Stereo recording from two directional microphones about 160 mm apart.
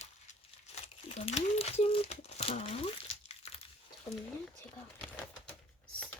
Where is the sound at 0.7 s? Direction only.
40° left (ahead or behind).